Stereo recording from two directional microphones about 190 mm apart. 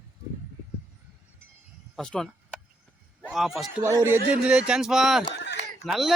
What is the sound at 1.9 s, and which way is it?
A man's voice, 5° left (ahead or behind).